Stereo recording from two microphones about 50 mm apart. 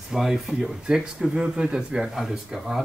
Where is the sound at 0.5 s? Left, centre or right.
Centre.